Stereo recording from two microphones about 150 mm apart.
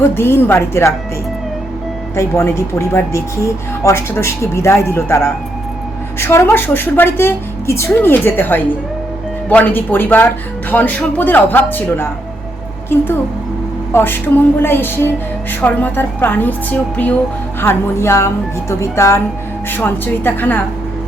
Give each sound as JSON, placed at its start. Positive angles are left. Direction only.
{"t": 0.1, "sound": "speech", "side_deg": 15}
{"t": 2.1, "sound": "speech", "side_deg": 15}